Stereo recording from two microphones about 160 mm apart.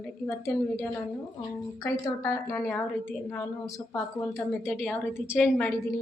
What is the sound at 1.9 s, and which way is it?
Speech, 20° left (ahead or behind).